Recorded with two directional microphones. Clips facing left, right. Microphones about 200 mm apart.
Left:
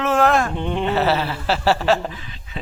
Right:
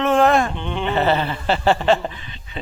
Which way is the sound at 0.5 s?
35° left (ahead or behind).